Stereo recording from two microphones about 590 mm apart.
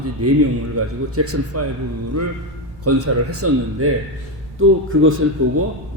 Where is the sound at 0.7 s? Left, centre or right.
Right.